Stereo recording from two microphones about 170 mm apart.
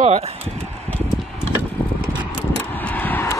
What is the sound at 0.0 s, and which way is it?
Speech, 40° right (ahead or behind).